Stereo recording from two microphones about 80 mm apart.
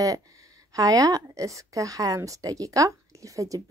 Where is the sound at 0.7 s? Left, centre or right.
Right.